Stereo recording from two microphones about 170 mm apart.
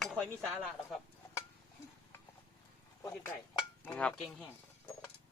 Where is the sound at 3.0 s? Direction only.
15° left (ahead or behind).